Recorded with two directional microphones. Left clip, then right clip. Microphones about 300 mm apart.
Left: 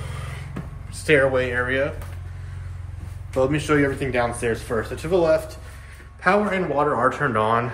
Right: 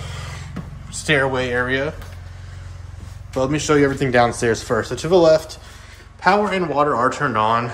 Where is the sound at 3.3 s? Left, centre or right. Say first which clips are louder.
Right 2 dB; centre.